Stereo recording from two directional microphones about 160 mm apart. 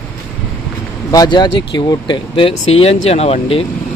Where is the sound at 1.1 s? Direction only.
25° left (ahead or behind).